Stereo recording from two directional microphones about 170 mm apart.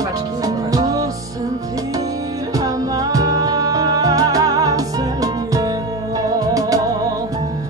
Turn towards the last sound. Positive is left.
turn(degrees=-20)  # may be behind; listen again after turning